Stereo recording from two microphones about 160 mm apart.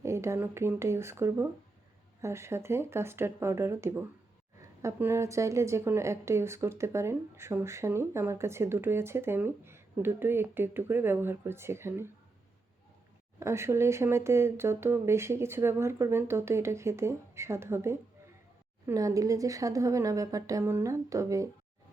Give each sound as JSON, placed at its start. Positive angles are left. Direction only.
{"t": 0.0, "sound": "speech", "side_deg": -15}
{"t": 13.4, "sound": "a woman's voice", "side_deg": -15}